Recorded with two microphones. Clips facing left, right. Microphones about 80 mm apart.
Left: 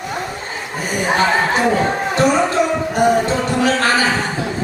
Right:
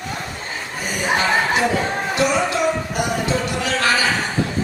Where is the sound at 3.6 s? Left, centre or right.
Left.